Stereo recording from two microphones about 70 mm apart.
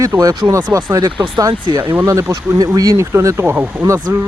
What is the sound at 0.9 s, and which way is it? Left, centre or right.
Speech, right.